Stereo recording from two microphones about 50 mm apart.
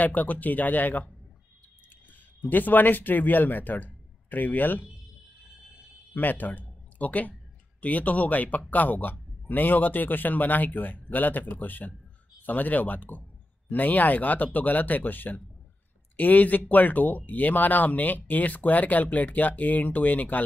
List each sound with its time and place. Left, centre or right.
0.0 s speech: left
2.5 s speech: left
6.1 s speech: left